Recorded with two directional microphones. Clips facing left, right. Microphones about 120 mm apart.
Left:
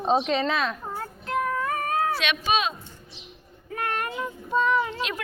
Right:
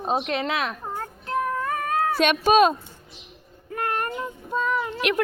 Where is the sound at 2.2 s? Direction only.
45° right (ahead or behind).